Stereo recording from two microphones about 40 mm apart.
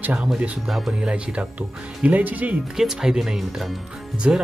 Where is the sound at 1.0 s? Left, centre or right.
Right.